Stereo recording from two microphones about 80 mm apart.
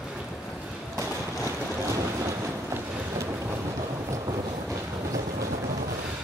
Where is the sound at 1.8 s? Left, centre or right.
Right.